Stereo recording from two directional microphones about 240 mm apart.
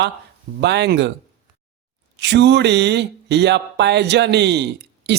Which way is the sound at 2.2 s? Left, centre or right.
Right.